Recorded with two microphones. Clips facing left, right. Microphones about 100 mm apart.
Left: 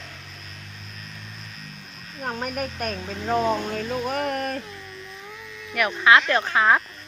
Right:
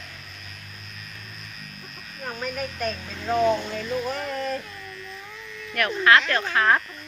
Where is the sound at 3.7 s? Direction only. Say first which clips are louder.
Left 1 dB; 55° left (ahead or behind).